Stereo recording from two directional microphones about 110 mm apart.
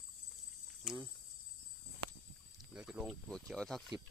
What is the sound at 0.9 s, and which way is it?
Speech, 5° right (ahead or behind).